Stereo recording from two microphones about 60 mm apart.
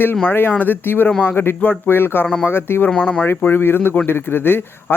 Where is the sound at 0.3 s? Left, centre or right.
Left.